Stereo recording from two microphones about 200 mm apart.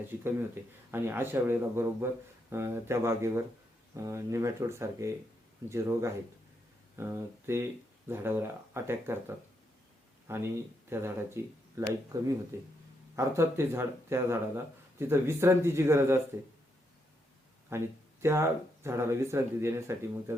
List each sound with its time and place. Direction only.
0.9 s speech: 10° right (ahead or behind)
17.7 s speech: 15° right (ahead or behind)